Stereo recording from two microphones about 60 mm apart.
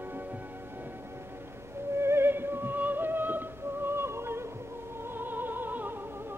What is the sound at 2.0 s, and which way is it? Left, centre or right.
Music, right.